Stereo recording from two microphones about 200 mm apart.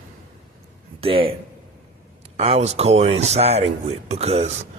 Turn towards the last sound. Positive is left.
turn(degrees=-30)  # may be behind; listen again after turning